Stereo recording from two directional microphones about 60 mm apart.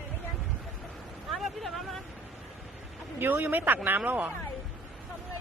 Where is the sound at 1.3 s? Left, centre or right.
Centre.